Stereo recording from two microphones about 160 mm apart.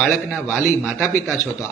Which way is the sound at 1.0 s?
15° left (ahead or behind).